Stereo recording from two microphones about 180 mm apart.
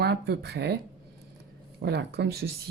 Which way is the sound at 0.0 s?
65° right (ahead or behind).